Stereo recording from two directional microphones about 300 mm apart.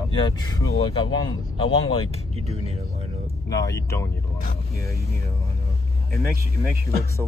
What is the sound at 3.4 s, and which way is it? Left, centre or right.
Speech, centre.